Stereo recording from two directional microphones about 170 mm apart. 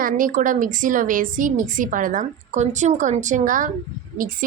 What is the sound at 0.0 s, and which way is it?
A woman's voice, 55° right (ahead or behind).